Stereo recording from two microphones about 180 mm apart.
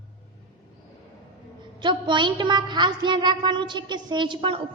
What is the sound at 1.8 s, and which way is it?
A woman's voice, 25° right (ahead or behind).